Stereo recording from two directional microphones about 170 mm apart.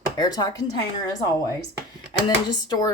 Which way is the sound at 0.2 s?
25° left (ahead or behind).